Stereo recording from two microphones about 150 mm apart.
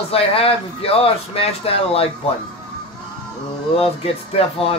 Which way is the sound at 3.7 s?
40° left (ahead or behind).